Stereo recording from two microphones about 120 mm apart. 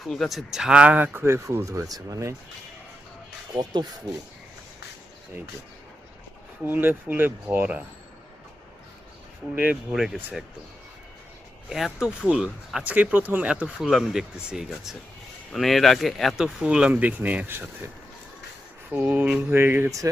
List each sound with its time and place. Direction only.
0.0 s speech: centre (ahead or behind); by 2.3 s 25° right (ahead or behind)
3.5 s speech: 35° right (ahead or behind)
6.7 s speech: 15° right (ahead or behind)
9.6 s speech: 5° right (ahead or behind)
11.9 s speech: 5° right (ahead or behind)
18.9 s speech: 15° right (ahead or behind)